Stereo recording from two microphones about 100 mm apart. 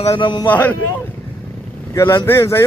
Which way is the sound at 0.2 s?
50° left (ahead or behind).